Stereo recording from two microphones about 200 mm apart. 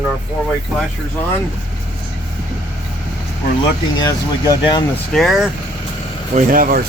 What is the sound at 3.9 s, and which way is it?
Speech, 20° left (ahead or behind).